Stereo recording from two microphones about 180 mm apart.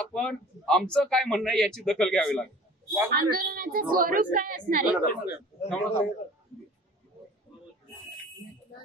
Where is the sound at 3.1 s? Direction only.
55° right (ahead or behind).